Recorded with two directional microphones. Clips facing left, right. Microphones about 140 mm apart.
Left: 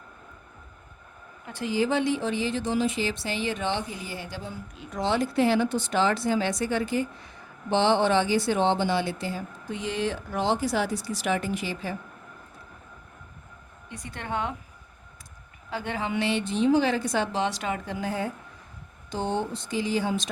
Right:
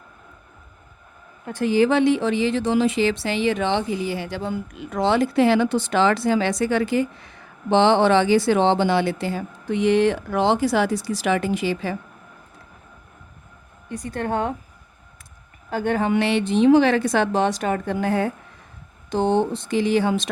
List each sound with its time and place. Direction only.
1.5 s speech: 50° right (ahead or behind)
1.7 s speech: 75° right (ahead or behind)
13.9 s speech: 45° right (ahead or behind)
15.7 s a woman's voice: 50° right (ahead or behind); by 20.3 s 65° right (ahead or behind)